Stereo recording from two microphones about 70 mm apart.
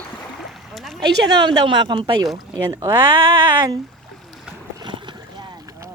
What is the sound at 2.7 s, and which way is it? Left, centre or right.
Speech, right.